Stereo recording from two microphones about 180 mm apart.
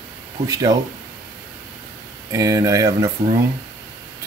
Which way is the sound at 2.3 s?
20° right (ahead or behind).